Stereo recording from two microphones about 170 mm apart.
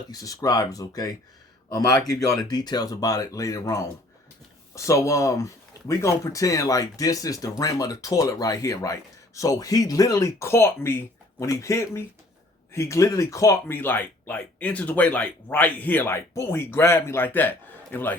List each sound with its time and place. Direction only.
0.1 s speech: 20° left (ahead or behind)